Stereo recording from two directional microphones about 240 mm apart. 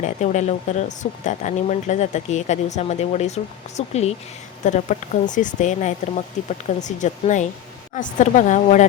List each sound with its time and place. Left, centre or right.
0.0 s speech: left